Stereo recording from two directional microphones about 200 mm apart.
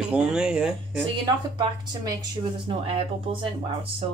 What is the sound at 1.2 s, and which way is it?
Speech, 20° right (ahead or behind).